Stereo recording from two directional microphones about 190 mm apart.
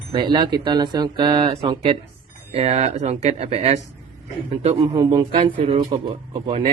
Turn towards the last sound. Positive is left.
turn(degrees=-30)  # may be behind; listen again after turning